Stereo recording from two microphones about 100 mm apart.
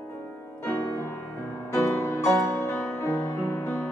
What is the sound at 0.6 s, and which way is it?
Music, 30° left (ahead or behind).